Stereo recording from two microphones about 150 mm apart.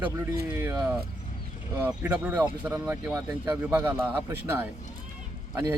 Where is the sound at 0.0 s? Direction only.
15° right (ahead or behind).